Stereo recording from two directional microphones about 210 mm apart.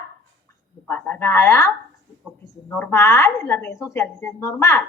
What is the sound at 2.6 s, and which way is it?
A woman's voice, 10° left (ahead or behind).